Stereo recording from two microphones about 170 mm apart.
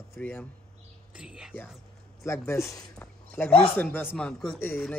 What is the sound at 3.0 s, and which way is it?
Speech, 5° left (ahead or behind).